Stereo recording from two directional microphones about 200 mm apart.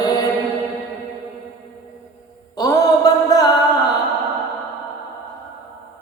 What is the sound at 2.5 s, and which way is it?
Mantra, 20° left (ahead or behind).